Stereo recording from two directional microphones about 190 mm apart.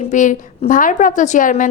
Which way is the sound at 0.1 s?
40° left (ahead or behind).